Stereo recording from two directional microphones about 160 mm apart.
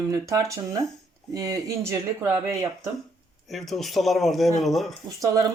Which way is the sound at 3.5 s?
Centre (ahead or behind).